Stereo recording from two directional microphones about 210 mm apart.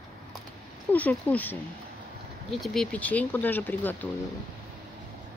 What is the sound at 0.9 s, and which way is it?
Speech, 5° left (ahead or behind).